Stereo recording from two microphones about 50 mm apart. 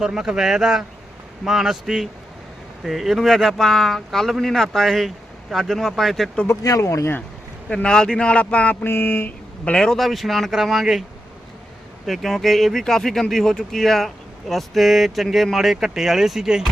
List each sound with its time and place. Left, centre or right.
0.0 s speech: centre
6.5 s speech: left
7.7 s speech: centre
8.8 s mantra: left
9.7 s speech: centre
10.0 s speech: centre
12.0 s speech: centre